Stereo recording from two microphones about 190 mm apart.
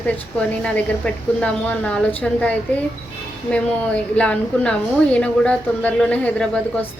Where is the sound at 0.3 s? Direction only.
5° left (ahead or behind).